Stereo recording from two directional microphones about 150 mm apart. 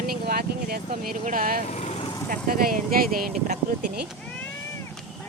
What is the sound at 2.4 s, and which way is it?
Speech, 75° right (ahead or behind).